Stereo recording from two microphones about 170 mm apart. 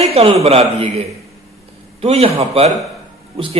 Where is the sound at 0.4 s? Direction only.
35° right (ahead or behind).